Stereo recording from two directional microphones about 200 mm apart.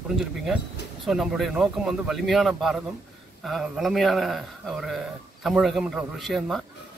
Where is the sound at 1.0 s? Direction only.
Centre (ahead or behind).